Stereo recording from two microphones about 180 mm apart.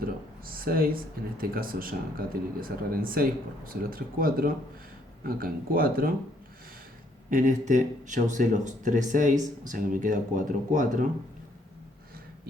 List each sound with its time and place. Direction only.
0.0 s a sound: 55° right (ahead or behind)
1.4 s speech: 55° right (ahead or behind)
7.3 s speech: 50° right (ahead or behind)